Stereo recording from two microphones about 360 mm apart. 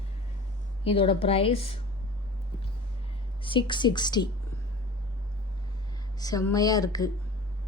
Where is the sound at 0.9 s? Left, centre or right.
Centre.